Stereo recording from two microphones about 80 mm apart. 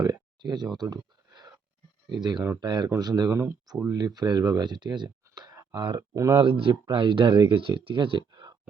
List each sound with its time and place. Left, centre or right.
0.0 s speech: right
0.8 s a sound: right
2.0 s speech: right
2.9 s speech: right
3.3 s speech: right
3.8 s speech: right
5.7 s speech: right
6.1 s speech: right
6.4 s speech: right
8.3 s a sound: right